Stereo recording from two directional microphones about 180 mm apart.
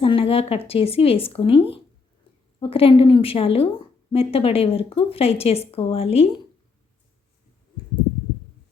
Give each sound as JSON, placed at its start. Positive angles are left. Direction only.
{"t": 0.0, "sound": "a woman's voice", "side_deg": 30}